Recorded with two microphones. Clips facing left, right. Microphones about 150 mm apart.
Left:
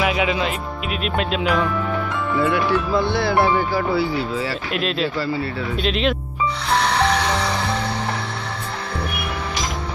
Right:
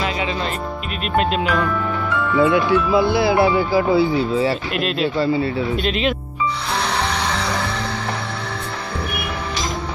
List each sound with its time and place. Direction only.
0.0 s music: 10° left (ahead or behind)
1.0 s speech: centre (ahead or behind)
2.4 s speech: 15° right (ahead or behind)
4.7 s speech: centre (ahead or behind)
5.1 s speech: 20° right (ahead or behind)
5.8 s speech: centre (ahead or behind)